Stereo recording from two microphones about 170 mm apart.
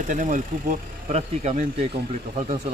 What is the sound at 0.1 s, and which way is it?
Speech, 50° right (ahead or behind).